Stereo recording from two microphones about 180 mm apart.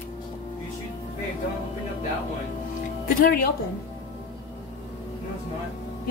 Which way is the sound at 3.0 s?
55° left (ahead or behind).